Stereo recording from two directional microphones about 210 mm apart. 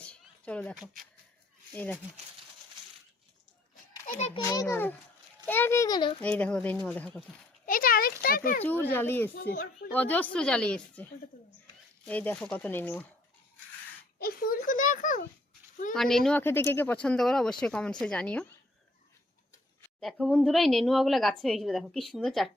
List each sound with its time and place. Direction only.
0.0 s a sound: 5° left (ahead or behind)
1.7 s a woman's voice: 10° left (ahead or behind)
4.4 s a woman's voice: 15° left (ahead or behind)
6.2 s speech: 5° left (ahead or behind)
7.6 s a child's voice: 40° left (ahead or behind)
8.6 s a woman's voice: 10° left (ahead or behind)
9.3 s speech: 50° left (ahead or behind)
9.9 s a woman's voice: 5° left (ahead or behind)
14.2 s speech: 45° left (ahead or behind)
15.9 s speech: centre (ahead or behind)
20.0 s speech: centre (ahead or behind)